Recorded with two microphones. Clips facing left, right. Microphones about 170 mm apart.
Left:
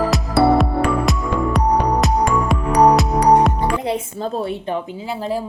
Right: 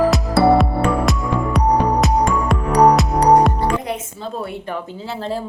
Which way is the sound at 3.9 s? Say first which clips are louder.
Left 4 dB; 40° left (ahead or behind).